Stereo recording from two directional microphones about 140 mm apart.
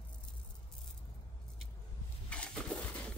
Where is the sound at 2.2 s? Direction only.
10° left (ahead or behind).